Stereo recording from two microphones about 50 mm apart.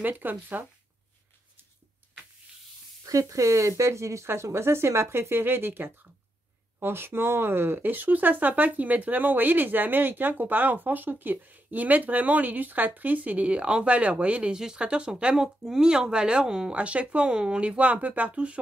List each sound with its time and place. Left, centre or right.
0.0 s speech: right
3.1 s speech: right
14.5 s speech: centre